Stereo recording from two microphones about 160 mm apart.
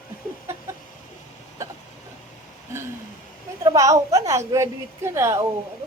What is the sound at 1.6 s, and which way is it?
Hiccup, 20° right (ahead or behind).